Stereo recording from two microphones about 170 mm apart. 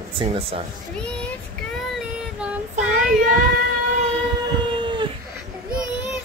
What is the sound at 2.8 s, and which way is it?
Child singing, 45° right (ahead or behind).